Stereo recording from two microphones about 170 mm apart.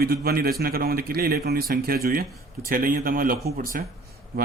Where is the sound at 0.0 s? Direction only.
65° right (ahead or behind).